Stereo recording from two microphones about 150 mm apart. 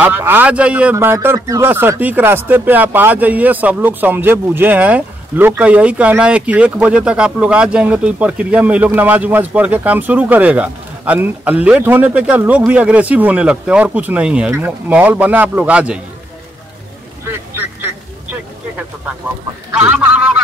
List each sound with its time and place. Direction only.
0.0 s a man's voice: 15° right (ahead or behind)
17.3 s quack: 15° right (ahead or behind)
19.7 s fowl: 10° right (ahead or behind)